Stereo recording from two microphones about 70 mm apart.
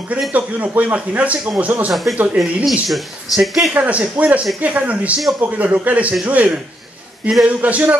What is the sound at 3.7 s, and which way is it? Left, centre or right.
A man's voice, centre.